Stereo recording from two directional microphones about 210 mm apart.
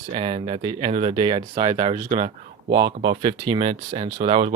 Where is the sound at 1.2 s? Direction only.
25° right (ahead or behind).